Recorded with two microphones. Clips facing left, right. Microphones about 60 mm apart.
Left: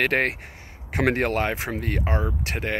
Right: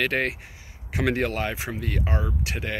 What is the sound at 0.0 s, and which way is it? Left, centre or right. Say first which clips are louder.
Speech: left 3 dB; left.